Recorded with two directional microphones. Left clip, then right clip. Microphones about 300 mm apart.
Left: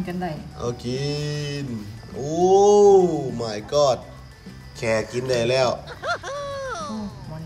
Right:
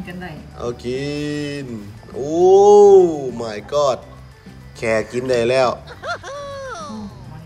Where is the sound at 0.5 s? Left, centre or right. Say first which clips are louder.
Right 8 dB; centre.